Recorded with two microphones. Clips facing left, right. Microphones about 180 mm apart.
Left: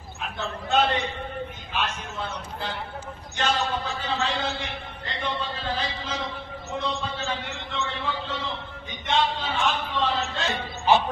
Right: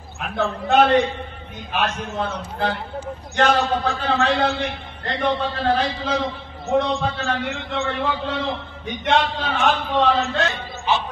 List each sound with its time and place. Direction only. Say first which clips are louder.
0.4 s a man's voice: right 7 dB; 60° right (ahead or behind)